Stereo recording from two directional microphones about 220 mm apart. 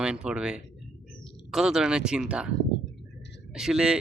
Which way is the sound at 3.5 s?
5° right (ahead or behind).